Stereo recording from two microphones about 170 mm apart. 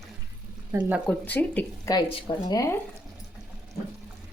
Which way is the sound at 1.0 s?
10° left (ahead or behind).